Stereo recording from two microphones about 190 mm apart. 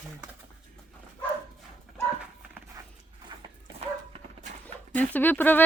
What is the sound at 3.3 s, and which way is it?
Dog, 20° right (ahead or behind).